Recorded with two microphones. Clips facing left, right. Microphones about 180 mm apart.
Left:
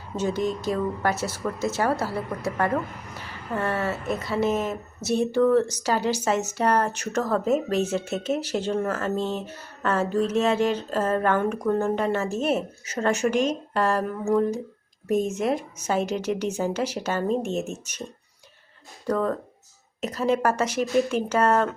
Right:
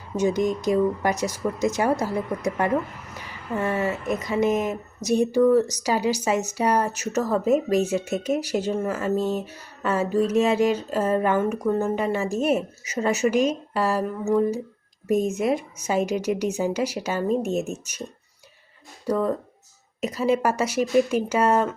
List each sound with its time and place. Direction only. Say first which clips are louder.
0.2 s speech: right 3 dB; 10° right (ahead or behind)
19.0 s speech: right 1 dB; 10° right (ahead or behind)